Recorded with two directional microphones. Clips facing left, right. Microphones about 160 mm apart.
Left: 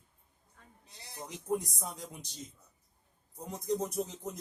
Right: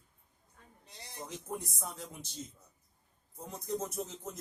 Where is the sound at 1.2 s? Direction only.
15° left (ahead or behind).